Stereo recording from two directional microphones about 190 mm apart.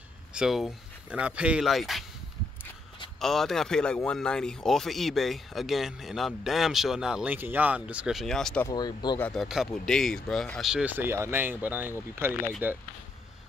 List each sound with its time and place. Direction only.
0.3 s speech: 5° right (ahead or behind)
3.2 s speech: centre (ahead or behind)
8.6 s speech: 20° left (ahead or behind)
9.2 s speech: centre (ahead or behind)